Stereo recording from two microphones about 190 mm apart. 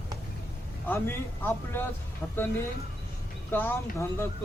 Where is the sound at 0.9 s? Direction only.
10° left (ahead or behind).